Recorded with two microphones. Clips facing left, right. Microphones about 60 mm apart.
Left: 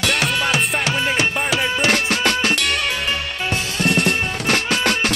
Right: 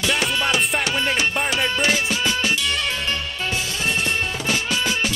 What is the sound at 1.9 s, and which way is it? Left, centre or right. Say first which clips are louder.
Music: left 3 dB; left.